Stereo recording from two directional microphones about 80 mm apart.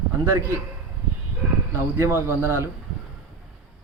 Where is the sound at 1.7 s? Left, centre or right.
Right.